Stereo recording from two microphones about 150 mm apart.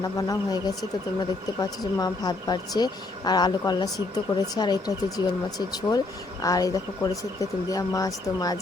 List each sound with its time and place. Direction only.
0.0 s speech: 25° left (ahead or behind)